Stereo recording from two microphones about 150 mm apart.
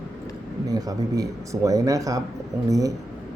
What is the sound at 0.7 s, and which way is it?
Speech, 25° right (ahead or behind).